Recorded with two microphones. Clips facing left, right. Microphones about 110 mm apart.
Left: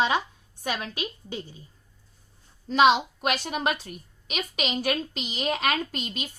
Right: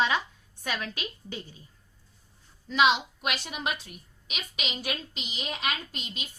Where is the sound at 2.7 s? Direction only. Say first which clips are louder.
Left 4 dB; 40° left (ahead or behind).